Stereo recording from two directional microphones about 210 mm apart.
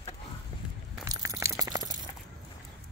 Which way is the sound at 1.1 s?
15° right (ahead or behind).